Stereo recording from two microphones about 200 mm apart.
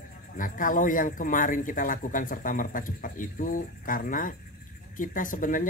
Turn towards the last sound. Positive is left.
turn(degrees=40)  # may be behind; listen again after turning